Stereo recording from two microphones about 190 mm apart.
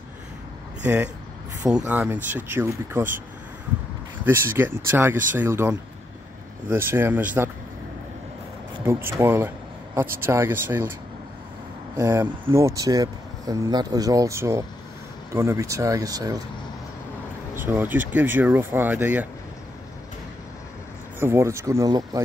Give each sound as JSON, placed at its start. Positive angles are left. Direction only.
{"t": 1.9, "sound": "speech", "side_deg": -10}
{"t": 4.2, "sound": "speech", "side_deg": -15}
{"t": 9.2, "sound": "speech", "side_deg": -10}
{"t": 12.0, "sound": "speech", "side_deg": -15}
{"t": 17.6, "sound": "speech", "side_deg": -10}
{"t": 21.2, "sound": "speech", "side_deg": -15}